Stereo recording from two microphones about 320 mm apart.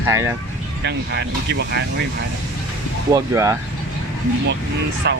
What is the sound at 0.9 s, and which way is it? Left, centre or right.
Speech, right.